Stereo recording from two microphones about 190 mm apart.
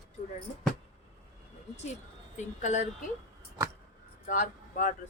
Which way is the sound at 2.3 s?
40° left (ahead or behind).